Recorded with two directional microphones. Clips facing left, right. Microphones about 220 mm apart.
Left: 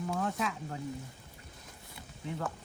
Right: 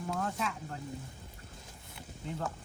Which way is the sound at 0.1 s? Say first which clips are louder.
Even; centre (ahead or behind).